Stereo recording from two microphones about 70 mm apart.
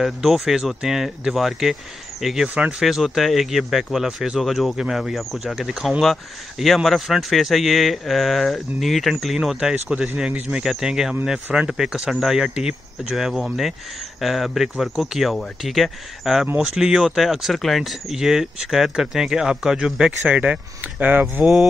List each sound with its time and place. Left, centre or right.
0.0 s speech: centre
2.4 s speech: centre
2.8 s speech: centre
21.0 s speech: right